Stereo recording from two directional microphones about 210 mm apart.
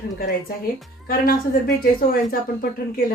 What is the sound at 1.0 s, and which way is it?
Speech, 45° left (ahead or behind).